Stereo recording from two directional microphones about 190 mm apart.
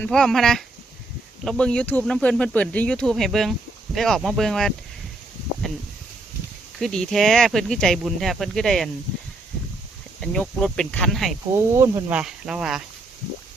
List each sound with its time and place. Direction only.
0.0 s speech: 5° left (ahead or behind)
6.7 s speech: centre (ahead or behind)
10.2 s speech: 5° left (ahead or behind)
11.8 s speech: 15° right (ahead or behind)
12.1 s speech: 5° right (ahead or behind)